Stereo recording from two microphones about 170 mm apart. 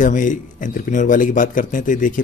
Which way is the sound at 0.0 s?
50° left (ahead or behind).